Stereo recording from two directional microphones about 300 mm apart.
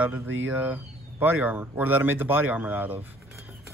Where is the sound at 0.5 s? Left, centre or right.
Centre.